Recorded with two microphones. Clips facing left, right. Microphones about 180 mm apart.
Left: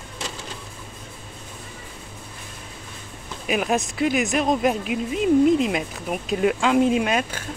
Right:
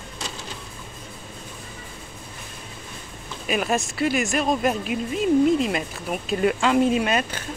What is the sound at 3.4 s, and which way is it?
Speech, 10° left (ahead or behind).